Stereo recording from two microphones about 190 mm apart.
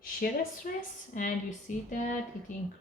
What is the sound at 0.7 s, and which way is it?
Speech, 45° left (ahead or behind).